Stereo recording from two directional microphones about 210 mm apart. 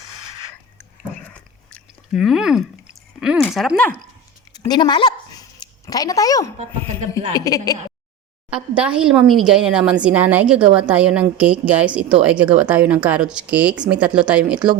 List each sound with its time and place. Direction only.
1.3 s chewing: 5° left (ahead or behind)
4.5 s a sound: 20° left (ahead or behind)
7.3 s speech: 15° left (ahead or behind)
8.4 s speech: 5° right (ahead or behind)